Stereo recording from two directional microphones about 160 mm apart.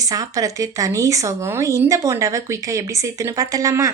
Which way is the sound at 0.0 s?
20° right (ahead or behind).